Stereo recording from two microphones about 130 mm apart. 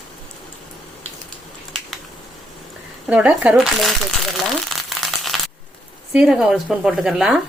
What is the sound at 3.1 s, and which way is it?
Speech, 10° right (ahead or behind).